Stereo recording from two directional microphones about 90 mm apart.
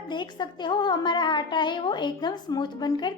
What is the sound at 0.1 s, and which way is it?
A woman's voice, 55° left (ahead or behind).